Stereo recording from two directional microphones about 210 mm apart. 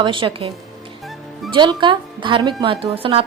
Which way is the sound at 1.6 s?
20° right (ahead or behind).